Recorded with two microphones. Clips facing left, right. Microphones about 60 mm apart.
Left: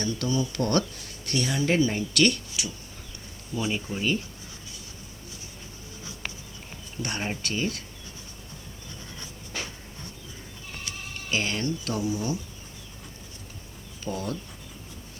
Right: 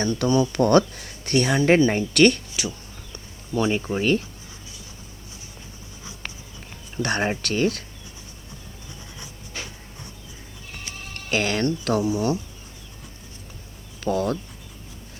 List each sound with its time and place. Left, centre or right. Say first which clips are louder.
0.0 s speech: right 7 dB; right
3.7 s speech: right 6 dB; right
6.9 s speech: right 8 dB; right
11.1 s speech: right 5 dB; right
14.0 s speech: right 9 dB; right